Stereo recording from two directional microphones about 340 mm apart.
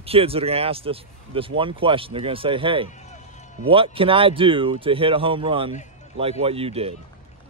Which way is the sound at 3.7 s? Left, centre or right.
Centre.